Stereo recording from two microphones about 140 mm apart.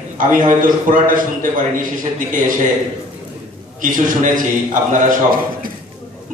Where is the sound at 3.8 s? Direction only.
70° right (ahead or behind).